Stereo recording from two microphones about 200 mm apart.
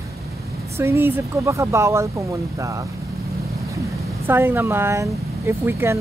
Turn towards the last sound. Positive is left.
turn(degrees=-10)  # may be behind; listen again after turning